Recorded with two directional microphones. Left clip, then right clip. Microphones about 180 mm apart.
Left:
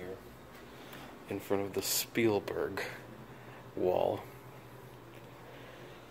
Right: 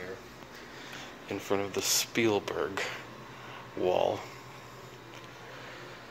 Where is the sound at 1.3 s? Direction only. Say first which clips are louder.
Right 3 dB; 5° left (ahead or behind).